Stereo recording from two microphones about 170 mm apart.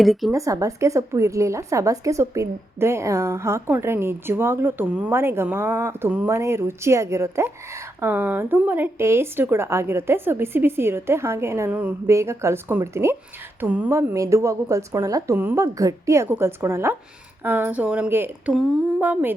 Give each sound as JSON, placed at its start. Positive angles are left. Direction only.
{"t": 0.0, "sound": "a woman's voice", "side_deg": 0}
{"t": 0.3, "sound": "speech", "side_deg": -20}